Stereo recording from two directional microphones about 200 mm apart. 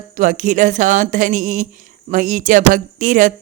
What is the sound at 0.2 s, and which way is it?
Speech, 40° right (ahead or behind).